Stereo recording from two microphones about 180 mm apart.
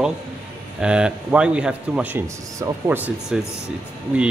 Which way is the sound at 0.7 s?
5° right (ahead or behind).